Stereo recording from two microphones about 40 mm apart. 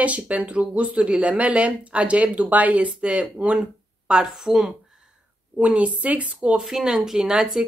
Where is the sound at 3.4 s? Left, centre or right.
Right.